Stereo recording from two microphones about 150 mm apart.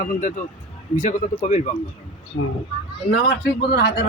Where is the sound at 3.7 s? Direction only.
90° left.